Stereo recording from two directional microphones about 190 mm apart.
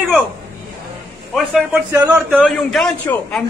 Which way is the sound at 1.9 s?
10° right (ahead or behind).